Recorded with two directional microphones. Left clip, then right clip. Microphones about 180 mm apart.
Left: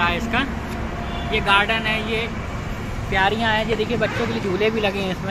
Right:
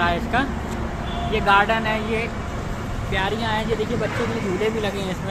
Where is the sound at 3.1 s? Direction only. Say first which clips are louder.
Left 5 dB; 35° left (ahead or behind).